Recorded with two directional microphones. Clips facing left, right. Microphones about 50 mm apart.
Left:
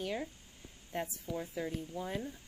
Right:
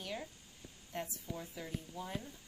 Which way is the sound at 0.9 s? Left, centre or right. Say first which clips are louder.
Left 5 dB; left.